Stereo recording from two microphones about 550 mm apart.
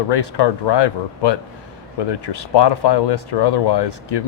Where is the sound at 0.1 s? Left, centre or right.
Left.